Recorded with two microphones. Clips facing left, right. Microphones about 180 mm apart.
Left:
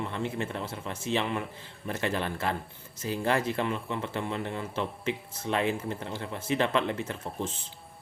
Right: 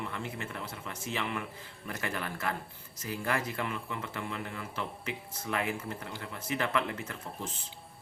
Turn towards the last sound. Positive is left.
turn(degrees=30)  # may be behind; listen again after turning